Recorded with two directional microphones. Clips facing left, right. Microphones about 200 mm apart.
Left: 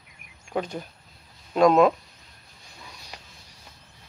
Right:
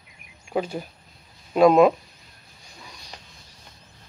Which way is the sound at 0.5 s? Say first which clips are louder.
Right 3 dB; 5° right (ahead or behind).